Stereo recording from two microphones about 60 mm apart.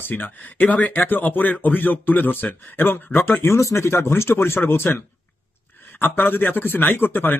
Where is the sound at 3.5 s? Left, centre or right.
Left.